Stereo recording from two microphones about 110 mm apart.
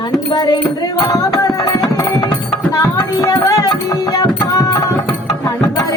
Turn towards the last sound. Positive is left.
turn(degrees=35)  # may be behind; listen again after turning